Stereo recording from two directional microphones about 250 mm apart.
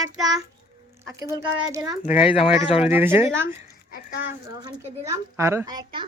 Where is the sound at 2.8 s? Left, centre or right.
Centre.